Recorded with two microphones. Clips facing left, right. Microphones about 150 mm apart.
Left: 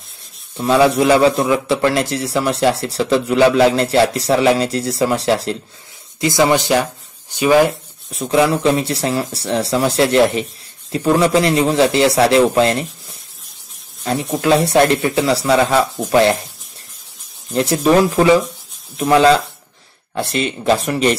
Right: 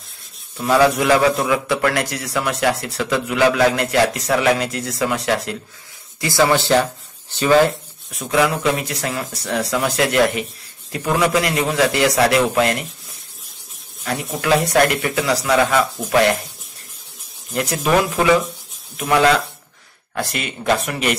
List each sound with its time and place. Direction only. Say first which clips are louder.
0.6 s a man's voice: left 2 dB; 25° left (ahead or behind)
6.2 s speech: left 2 dB; 20° left (ahead or behind)
8.1 s a man's voice: left 4 dB; 30° left (ahead or behind)
14.4 s a man's voice: left 3 dB; 30° left (ahead or behind)
17.5 s a man's voice: left 5 dB; 30° left (ahead or behind)